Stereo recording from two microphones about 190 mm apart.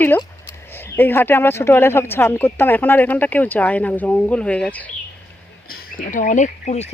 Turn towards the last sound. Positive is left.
turn(degrees=35)  # may be behind; listen again after turning